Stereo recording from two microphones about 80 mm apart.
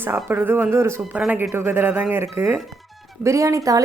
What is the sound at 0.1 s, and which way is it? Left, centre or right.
Speech, right.